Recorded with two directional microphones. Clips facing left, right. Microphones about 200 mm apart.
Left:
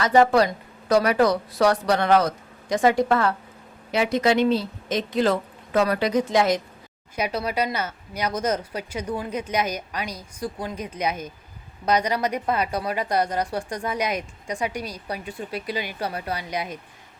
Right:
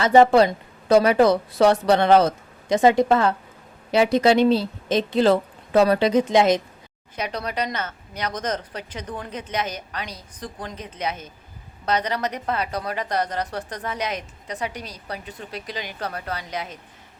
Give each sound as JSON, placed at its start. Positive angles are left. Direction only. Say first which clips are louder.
{"t": 0.0, "sound": "speech", "louder": "right 3 dB", "side_deg": -25}
{"t": 3.9, "sound": "speech", "louder": "right 4 dB", "side_deg": -30}
{"t": 7.2, "sound": "speech", "louder": "left 2 dB", "side_deg": 10}